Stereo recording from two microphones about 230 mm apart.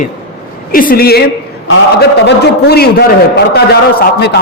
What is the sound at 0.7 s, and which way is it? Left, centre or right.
A man's voice, left.